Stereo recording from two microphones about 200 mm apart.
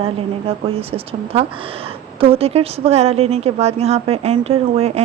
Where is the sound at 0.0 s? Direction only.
30° right (ahead or behind).